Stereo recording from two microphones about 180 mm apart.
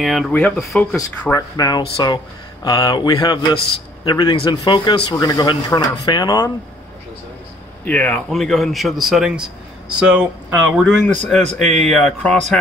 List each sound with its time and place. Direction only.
0.0 s a man's voice: centre (ahead or behind)
0.9 s a man's voice: 15° left (ahead or behind)
7.8 s a man's voice: 10° left (ahead or behind); by 10.9 s 10° right (ahead or behind)
11.2 s a man's voice: centre (ahead or behind)